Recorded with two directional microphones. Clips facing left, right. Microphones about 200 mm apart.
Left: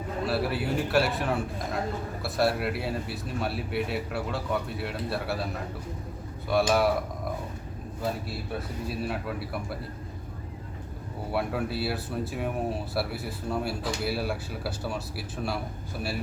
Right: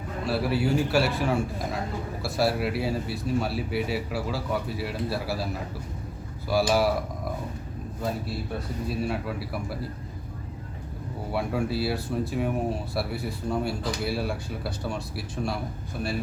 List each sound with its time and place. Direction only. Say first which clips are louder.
0.3 s speech: right 4 dB; centre (ahead or behind)
6.5 s speech: even; centre (ahead or behind)
8.9 s speech: right 3 dB; centre (ahead or behind)
11.3 s speech: right 2 dB; centre (ahead or behind)